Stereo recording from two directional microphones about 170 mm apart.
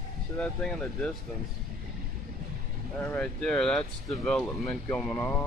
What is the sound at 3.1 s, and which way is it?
Speech, 5° left (ahead or behind).